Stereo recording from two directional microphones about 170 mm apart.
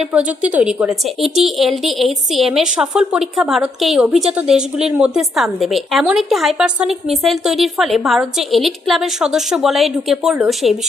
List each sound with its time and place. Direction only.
0.0 s a woman's voice: 5° right (ahead or behind)